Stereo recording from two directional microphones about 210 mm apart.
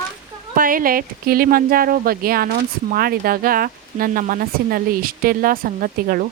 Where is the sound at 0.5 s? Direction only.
40° right (ahead or behind).